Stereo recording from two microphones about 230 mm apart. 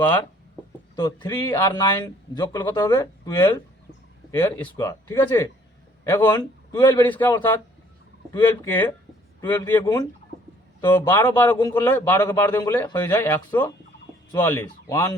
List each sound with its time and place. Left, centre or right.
0.9 s a man's voice: centre